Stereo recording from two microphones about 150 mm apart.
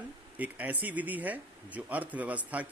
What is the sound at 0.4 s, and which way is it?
Speech, 10° right (ahead or behind).